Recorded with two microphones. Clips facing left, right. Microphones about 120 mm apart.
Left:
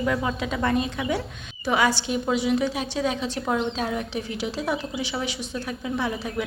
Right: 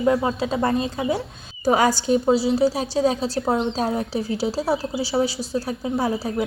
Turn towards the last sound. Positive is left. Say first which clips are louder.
# right 4 dB
turn(degrees=-35)  # may be behind; listen again after turning